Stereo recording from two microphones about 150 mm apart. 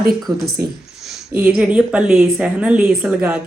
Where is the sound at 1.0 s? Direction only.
Centre (ahead or behind).